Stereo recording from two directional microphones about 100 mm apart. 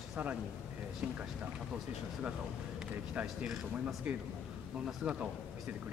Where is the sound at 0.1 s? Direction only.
10° right (ahead or behind).